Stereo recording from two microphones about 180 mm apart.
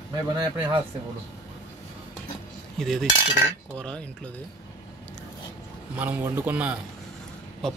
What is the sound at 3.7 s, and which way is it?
Speech, 5° left (ahead or behind).